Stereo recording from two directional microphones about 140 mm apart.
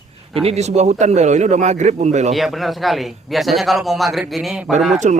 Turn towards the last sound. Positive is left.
turn(degrees=-55)  # may be behind; listen again after turning